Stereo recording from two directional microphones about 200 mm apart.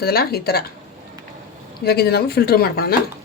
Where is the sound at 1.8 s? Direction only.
50° left (ahead or behind).